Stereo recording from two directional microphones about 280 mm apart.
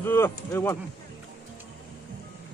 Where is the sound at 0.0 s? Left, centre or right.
Centre.